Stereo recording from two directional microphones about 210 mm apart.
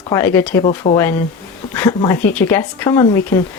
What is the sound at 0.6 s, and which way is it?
Speech, 30° left (ahead or behind).